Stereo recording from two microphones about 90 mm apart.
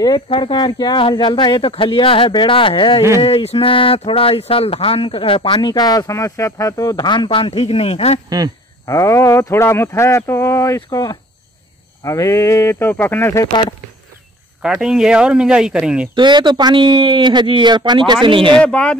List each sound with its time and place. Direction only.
0.3 s speech: 65° left (ahead or behind)
3.2 s speech: 85° left; by 7.1 s 40° left (ahead or behind)
7.1 s speech: 70° left (ahead or behind); by 7.9 s 90° left
8.8 s speech: 35° left (ahead or behind)
13.5 s speech: 55° left (ahead or behind)
14.6 s speech: 10° right (ahead or behind)
16.2 s speech: 55° right (ahead or behind)
16.7 s speech: 65° right (ahead or behind)
18.2 s speech: 65° right (ahead or behind)
18.6 s speech: 10° left (ahead or behind)